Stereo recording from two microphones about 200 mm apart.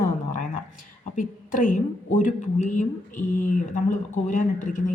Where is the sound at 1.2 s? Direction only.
40° left (ahead or behind).